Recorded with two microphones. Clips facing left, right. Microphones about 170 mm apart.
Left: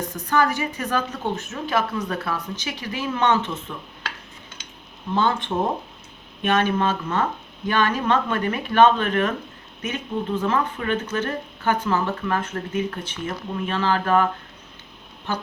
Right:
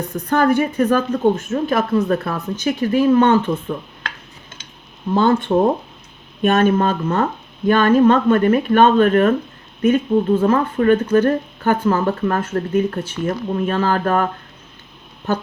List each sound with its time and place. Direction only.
0.0 s speech: 55° right (ahead or behind)
5.1 s speech: 45° right (ahead or behind)
12.4 s speech: 30° right (ahead or behind)
12.7 s speech: 40° right (ahead or behind)